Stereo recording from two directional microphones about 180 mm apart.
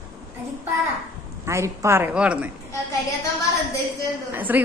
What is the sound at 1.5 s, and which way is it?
A woman's voice, 15° right (ahead or behind).